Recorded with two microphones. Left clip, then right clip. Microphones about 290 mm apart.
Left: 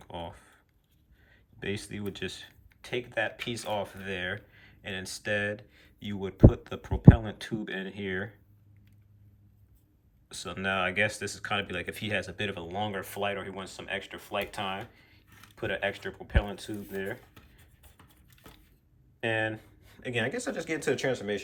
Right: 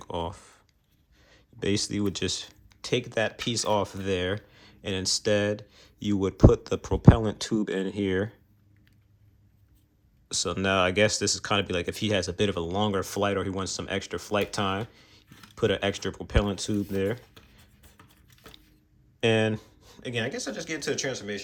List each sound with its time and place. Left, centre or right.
0.1 s a sound: centre
1.3 s speech: centre
10.2 s speech: centre
14.9 s a sound: right
15.5 s speech: right
19.4 s speech: centre